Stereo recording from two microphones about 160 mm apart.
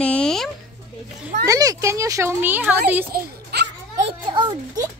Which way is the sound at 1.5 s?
20° right (ahead or behind).